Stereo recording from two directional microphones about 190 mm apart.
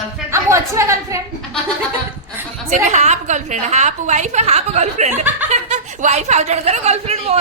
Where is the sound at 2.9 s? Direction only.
35° right (ahead or behind).